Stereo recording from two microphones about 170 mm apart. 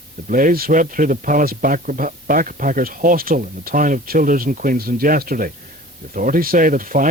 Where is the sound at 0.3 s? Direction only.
50° right (ahead or behind).